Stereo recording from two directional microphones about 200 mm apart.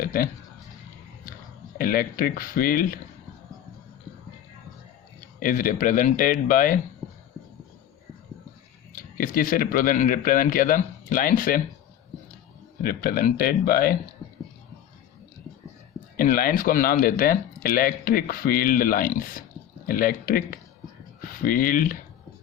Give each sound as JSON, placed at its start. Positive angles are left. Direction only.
{"t": 0.0, "sound": "speech", "side_deg": 45}
{"t": 1.8, "sound": "speech", "side_deg": 45}
{"t": 5.4, "sound": "speech", "side_deg": 45}
{"t": 9.0, "sound": "speech", "side_deg": 45}
{"t": 12.8, "sound": "speech", "side_deg": 50}
{"t": 16.1, "sound": "speech", "side_deg": 45}
{"t": 21.4, "sound": "speech", "side_deg": 45}